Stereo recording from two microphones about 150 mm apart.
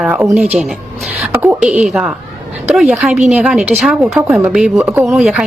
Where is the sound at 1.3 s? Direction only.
10° right (ahead or behind).